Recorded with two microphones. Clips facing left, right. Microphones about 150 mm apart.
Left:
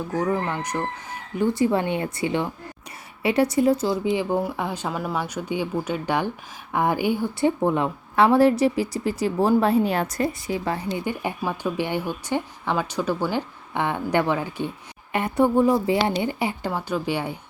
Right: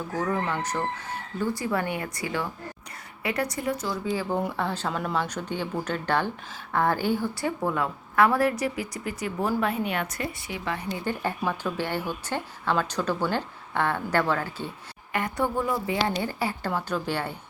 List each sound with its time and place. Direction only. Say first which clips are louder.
0.1 s a woman's voice: left 3 dB; 15° left (ahead or behind)
4.4 s a woman's voice: left 2 dB; 10° left (ahead or behind); by 11.0 s 30° left (ahead or behind)
11.0 s a woman's voice: left 1 dB; 15° left (ahead or behind)